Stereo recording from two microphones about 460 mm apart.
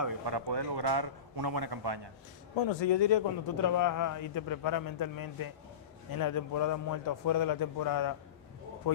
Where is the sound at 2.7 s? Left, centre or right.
Left.